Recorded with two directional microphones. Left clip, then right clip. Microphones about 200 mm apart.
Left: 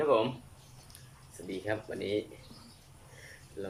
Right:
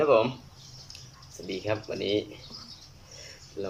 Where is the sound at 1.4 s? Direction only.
Centre (ahead or behind).